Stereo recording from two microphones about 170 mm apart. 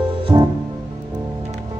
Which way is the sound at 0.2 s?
25° right (ahead or behind).